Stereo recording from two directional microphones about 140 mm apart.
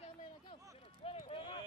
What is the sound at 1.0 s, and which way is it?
Run, 45° left (ahead or behind).